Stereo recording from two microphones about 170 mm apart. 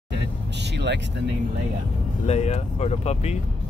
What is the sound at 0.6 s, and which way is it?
Speech, 90° right.